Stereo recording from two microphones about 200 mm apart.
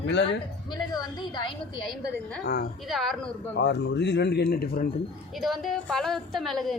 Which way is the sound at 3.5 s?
60° left (ahead or behind).